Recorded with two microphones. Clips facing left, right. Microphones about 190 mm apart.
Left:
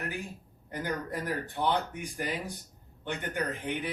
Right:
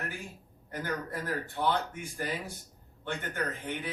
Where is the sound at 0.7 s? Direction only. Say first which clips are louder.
Left 1 dB; 15° left (ahead or behind).